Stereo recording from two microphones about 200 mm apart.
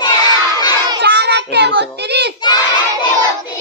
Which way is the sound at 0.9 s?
55° right (ahead or behind).